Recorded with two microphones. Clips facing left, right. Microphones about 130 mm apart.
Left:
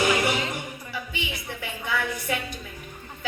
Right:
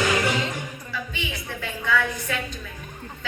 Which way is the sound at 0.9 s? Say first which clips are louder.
Right 1 dB; 15° left (ahead or behind).